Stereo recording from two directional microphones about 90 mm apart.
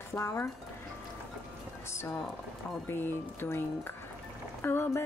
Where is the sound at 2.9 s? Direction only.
25° left (ahead or behind).